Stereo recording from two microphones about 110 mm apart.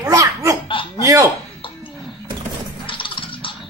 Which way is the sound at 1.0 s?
30° right (ahead or behind).